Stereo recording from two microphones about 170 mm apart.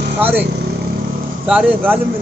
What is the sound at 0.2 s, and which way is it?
A man's voice, 10° right (ahead or behind).